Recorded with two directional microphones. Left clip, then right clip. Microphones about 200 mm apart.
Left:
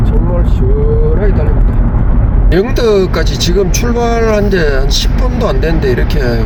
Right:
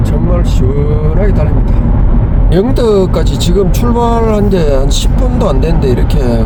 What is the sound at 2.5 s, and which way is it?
Speech, 20° left (ahead or behind).